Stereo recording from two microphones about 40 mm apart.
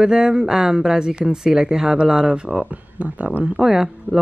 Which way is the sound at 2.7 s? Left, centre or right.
Right.